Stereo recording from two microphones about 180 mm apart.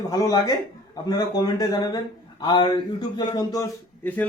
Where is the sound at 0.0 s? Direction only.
20° left (ahead or behind).